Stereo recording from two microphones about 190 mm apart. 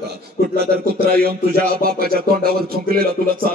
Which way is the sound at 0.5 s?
55° right (ahead or behind).